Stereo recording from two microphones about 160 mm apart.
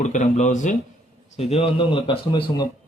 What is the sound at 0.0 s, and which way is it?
Speech, 50° left (ahead or behind).